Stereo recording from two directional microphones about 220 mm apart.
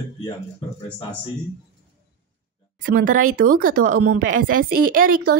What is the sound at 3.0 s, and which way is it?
Speech, 35° right (ahead or behind).